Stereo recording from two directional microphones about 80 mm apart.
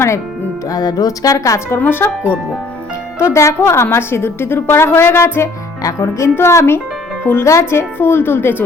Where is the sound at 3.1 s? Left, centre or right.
Left.